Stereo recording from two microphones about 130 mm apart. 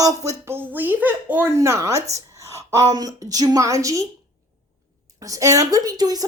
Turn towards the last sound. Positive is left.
turn(degrees=-30)  # may be behind; listen again after turning